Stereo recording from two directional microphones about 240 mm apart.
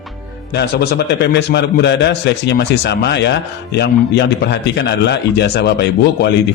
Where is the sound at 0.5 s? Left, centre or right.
Left.